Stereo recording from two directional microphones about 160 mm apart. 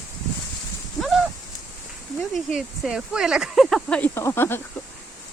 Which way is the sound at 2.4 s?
5° right (ahead or behind).